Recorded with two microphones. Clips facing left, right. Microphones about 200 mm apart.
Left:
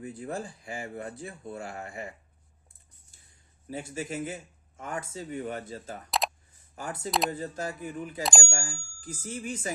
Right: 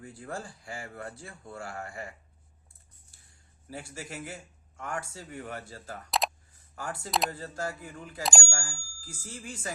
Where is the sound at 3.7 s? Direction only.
20° left (ahead or behind).